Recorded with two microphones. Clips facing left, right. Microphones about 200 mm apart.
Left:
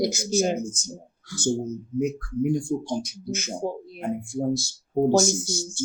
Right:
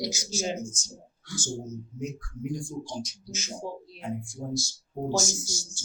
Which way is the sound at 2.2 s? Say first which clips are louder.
Left 10 dB; 60° left (ahead or behind).